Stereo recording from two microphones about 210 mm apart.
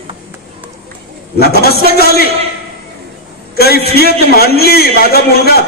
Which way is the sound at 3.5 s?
50° left (ahead or behind).